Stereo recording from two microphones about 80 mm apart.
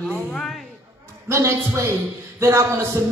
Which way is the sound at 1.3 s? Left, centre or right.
Right.